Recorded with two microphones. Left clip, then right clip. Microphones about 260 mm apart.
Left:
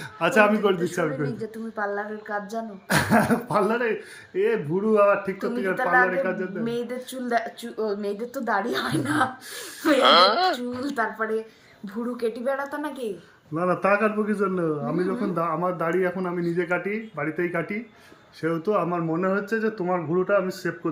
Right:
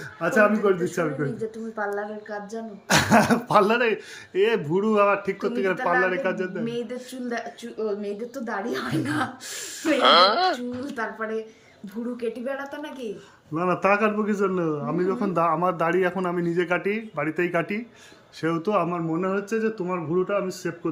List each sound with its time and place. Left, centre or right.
0.2 s a man's voice: centre